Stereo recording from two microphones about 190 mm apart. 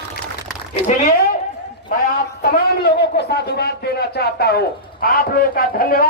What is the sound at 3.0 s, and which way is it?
A man's voice, 60° left (ahead or behind).